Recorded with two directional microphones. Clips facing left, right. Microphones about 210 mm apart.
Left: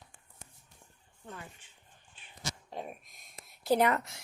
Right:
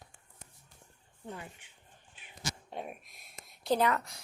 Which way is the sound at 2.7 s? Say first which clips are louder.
Even; 5° right (ahead or behind).